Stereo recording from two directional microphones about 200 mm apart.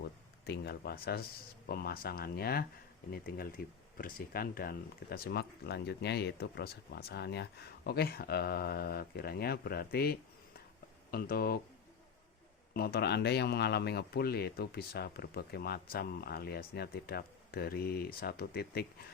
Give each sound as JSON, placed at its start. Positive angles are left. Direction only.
{"t": 0.4, "sound": "a man's voice", "side_deg": 55}
{"t": 12.7, "sound": "a man's voice", "side_deg": 50}